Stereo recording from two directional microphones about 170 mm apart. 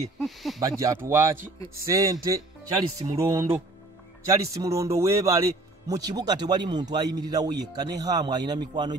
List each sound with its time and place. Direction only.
0.2 s speech: centre (ahead or behind)
0.6 s speech: 20° right (ahead or behind)